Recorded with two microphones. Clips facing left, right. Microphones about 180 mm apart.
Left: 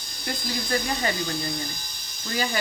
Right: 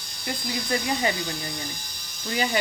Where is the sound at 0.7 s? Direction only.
15° right (ahead or behind).